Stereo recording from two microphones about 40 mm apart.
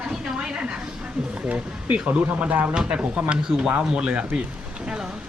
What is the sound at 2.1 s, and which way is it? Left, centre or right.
Speech, right.